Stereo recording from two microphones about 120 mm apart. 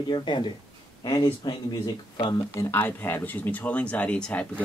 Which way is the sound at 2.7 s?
20° left (ahead or behind).